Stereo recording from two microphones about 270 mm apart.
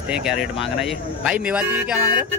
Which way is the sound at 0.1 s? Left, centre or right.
Centre.